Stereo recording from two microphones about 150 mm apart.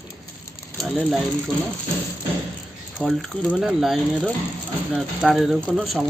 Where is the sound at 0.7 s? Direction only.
Centre (ahead or behind).